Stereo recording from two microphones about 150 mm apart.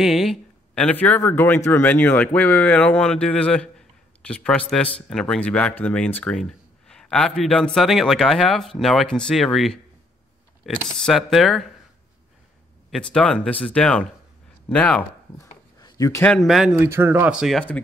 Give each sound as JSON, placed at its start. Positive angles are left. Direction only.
{"t": 0.0, "sound": "speech", "side_deg": 0}
{"t": 10.6, "sound": "speech", "side_deg": -10}
{"t": 11.1, "sound": "speech", "side_deg": 0}
{"t": 12.9, "sound": "speech", "side_deg": 5}
{"t": 15.3, "sound": "a sound", "side_deg": 20}
{"t": 16.3, "sound": "speech", "side_deg": 0}
{"t": 16.8, "sound": "speech", "side_deg": -15}